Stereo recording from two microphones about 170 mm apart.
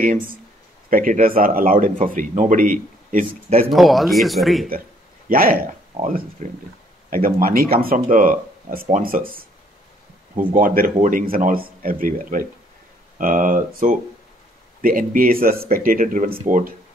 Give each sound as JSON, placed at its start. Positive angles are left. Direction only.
{"t": 0.8, "sound": "speech", "side_deg": -55}
{"t": 3.7, "sound": "speech", "side_deg": 0}
{"t": 5.3, "sound": "speech", "side_deg": -55}